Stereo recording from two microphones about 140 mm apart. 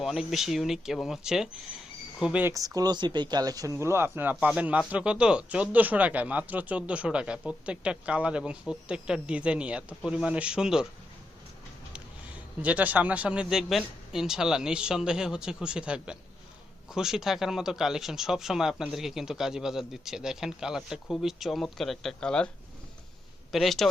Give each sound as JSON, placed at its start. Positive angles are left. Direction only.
{"t": 0.0, "sound": "speech", "side_deg": 0}
{"t": 2.5, "sound": "speech", "side_deg": -25}
{"t": 12.6, "sound": "speech", "side_deg": -10}
{"t": 23.5, "sound": "speech", "side_deg": 0}